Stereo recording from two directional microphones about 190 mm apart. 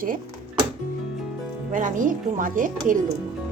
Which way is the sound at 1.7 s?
45° right (ahead or behind).